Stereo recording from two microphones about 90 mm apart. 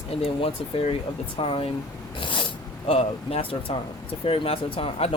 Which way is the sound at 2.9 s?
90° left.